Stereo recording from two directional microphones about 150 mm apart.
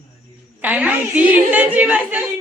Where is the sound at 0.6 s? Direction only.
10° right (ahead or behind).